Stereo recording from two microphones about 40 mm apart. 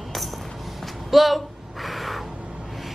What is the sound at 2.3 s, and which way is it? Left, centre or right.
Music, right.